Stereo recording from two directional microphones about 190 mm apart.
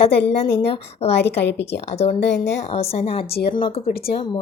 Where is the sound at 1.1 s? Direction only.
65° left (ahead or behind).